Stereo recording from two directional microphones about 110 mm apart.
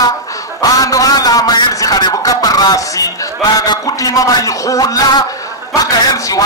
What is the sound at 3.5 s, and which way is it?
A man's voice, 35° left (ahead or behind).